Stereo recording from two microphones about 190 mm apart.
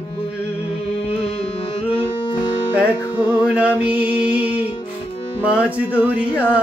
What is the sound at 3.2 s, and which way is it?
Music, 5° right (ahead or behind).